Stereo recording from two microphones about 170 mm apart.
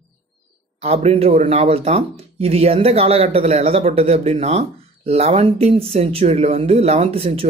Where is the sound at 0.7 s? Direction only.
35° right (ahead or behind).